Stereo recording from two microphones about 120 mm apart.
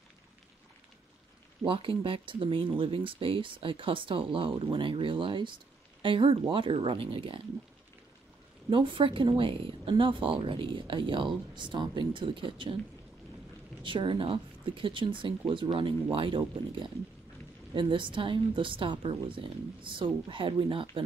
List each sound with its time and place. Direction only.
1.7 s speech: 45° right (ahead or behind)
8.6 s speech: 45° right (ahead or behind)
13.8 s speech: 45° right (ahead or behind)